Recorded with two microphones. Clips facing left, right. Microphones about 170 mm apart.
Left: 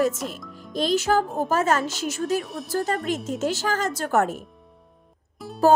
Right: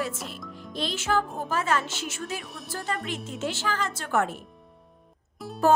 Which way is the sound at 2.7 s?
40° left (ahead or behind).